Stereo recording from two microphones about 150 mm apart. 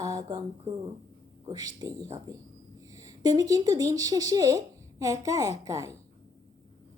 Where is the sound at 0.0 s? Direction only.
25° right (ahead or behind).